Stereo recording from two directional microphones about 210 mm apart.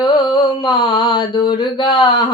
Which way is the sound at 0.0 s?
20° left (ahead or behind).